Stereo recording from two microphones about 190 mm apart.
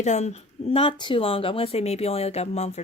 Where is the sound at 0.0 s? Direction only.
35° left (ahead or behind).